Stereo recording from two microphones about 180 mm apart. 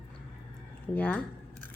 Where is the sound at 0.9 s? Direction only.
10° left (ahead or behind).